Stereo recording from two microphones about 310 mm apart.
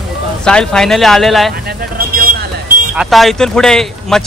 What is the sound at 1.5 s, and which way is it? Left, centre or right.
Speech, right.